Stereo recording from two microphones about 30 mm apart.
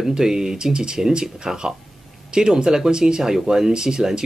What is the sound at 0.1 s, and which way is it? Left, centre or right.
Speech, centre.